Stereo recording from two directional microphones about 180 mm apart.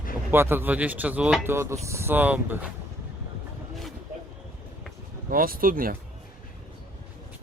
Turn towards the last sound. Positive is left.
turn(degrees=-50)  # may be behind; listen again after turning